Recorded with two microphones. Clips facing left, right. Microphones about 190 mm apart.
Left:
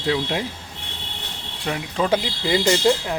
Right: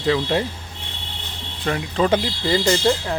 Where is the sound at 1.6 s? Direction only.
5° left (ahead or behind).